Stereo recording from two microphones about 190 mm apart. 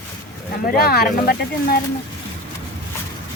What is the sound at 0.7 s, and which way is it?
Speech, 55° left (ahead or behind).